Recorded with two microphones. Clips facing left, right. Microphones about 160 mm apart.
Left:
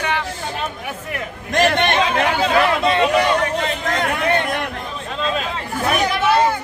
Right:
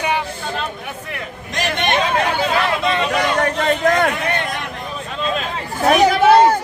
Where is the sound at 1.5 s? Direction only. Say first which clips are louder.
Left 7 dB; 55° left (ahead or behind).